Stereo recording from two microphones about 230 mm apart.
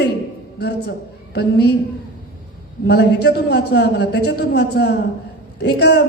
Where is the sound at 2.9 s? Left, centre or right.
Left.